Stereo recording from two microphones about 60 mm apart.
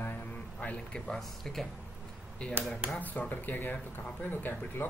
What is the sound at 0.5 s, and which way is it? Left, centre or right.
Speech, left.